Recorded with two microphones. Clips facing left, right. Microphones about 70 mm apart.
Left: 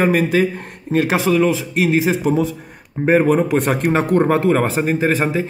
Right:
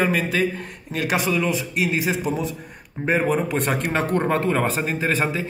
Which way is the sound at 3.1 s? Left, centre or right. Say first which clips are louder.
Left 7 dB; left.